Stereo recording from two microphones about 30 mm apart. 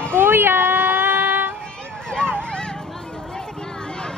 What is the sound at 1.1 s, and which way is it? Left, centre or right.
Music, right.